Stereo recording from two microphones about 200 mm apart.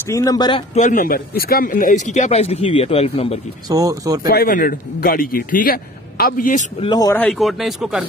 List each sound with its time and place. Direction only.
0.1 s speech: 15° left (ahead or behind)
0.7 s speech: 40° left (ahead or behind)
3.6 s speech: 15° right (ahead or behind)
4.3 s a man's voice: 45° left (ahead or behind)
6.8 s speech: 20° left (ahead or behind)
7.2 s speech: centre (ahead or behind)